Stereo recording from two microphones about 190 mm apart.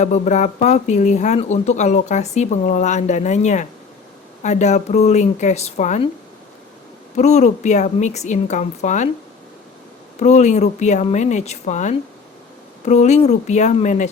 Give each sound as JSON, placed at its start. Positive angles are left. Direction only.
{"t": 0.0, "sound": "speech", "side_deg": 40}
{"t": 7.2, "sound": "speech", "side_deg": 35}
{"t": 10.2, "sound": "speech", "side_deg": 35}